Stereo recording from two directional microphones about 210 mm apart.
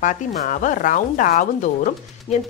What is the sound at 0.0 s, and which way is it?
Speech, 35° left (ahead or behind).